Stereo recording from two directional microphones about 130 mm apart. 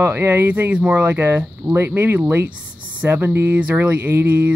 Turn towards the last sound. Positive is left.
turn(degrees=-15)  # may be behind; listen again after turning